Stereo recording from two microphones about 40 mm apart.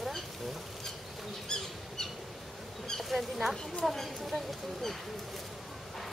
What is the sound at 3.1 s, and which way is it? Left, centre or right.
Speech, centre.